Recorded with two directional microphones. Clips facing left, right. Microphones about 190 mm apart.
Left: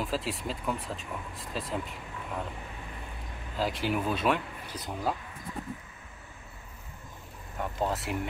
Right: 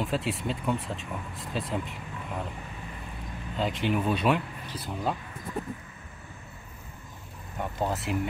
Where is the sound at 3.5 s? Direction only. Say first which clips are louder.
Right 2 dB; 5° left (ahead or behind).